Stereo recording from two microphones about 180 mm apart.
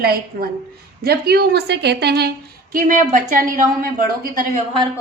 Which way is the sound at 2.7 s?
50° right (ahead or behind).